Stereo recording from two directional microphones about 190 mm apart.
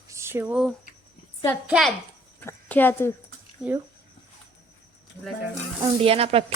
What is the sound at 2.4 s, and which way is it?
Speech, 10° left (ahead or behind).